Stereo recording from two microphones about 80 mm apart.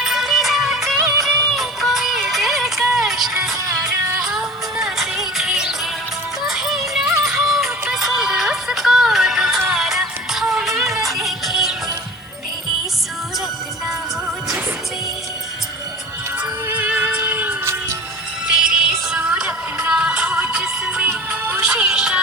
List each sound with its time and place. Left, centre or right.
0.0 s music: centre
13.8 s music: centre
16.4 s music: centre
18.4 s music: centre